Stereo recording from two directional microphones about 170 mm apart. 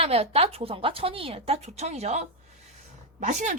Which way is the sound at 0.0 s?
35° right (ahead or behind).